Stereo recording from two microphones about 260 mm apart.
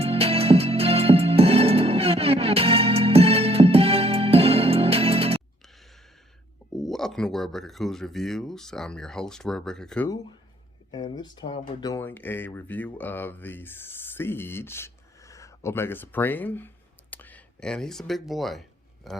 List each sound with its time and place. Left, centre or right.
0.0 s music: right
6.7 s speech: centre
10.9 s speech: centre